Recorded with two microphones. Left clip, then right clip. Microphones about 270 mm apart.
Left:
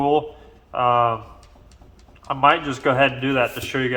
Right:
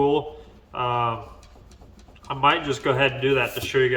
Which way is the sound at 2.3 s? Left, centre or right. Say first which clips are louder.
Left 3 dB; centre.